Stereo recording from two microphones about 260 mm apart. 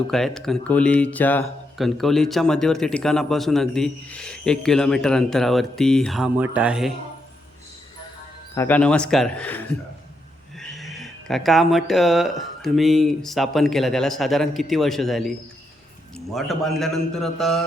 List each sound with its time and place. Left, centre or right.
0.1 s speech: centre
8.5 s speech: centre
10.6 s speech: centre